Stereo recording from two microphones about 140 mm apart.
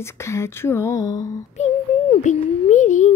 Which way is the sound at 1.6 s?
55° left (ahead or behind).